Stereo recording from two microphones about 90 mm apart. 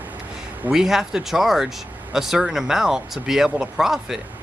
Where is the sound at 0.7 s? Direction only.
5° right (ahead or behind).